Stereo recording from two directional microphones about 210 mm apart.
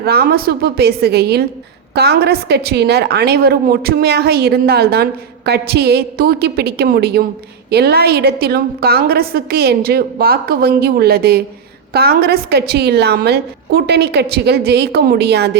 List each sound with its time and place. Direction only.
0.0 s a woman's voice: 50° right (ahead or behind)